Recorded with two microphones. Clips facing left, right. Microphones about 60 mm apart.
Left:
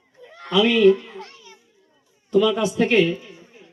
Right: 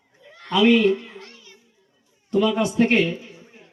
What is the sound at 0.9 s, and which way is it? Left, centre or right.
Babbling, left.